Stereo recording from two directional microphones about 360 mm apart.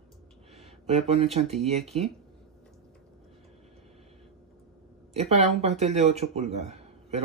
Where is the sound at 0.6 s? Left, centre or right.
Centre.